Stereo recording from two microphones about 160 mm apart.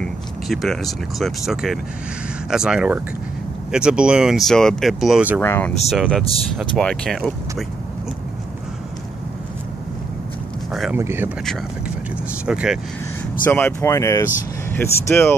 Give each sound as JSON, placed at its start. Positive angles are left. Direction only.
{"t": 0.0, "sound": "speech", "side_deg": 0}
{"t": 5.4, "sound": "speech", "side_deg": 15}
{"t": 5.9, "sound": "speech", "side_deg": 0}
{"t": 10.7, "sound": "a sound", "side_deg": 0}
{"t": 11.0, "sound": "speech", "side_deg": -15}
{"t": 12.4, "sound": "speech", "side_deg": -5}
{"t": 13.5, "sound": "speech", "side_deg": 10}